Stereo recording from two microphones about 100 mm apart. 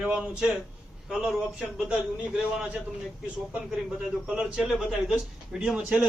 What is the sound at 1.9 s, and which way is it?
Speech, 10° right (ahead or behind).